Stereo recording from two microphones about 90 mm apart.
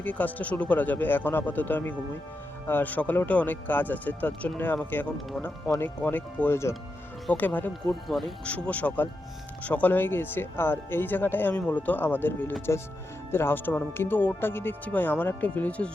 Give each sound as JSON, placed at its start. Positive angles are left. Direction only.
{"t": 0.0, "sound": "speech", "side_deg": 20}
{"t": 7.9, "sound": "speech", "side_deg": 5}
{"t": 8.4, "sound": "speech", "side_deg": 15}